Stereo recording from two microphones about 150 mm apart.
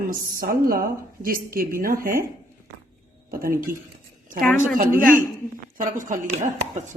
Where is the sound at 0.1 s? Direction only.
75° right (ahead or behind).